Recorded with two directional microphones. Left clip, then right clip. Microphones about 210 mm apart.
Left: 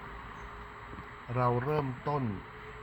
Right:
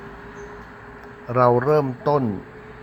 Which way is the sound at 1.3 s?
40° right (ahead or behind).